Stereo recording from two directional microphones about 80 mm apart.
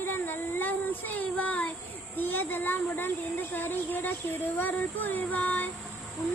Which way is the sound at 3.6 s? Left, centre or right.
Left.